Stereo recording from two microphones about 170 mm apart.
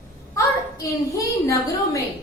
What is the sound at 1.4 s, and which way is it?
Speech, 20° left (ahead or behind).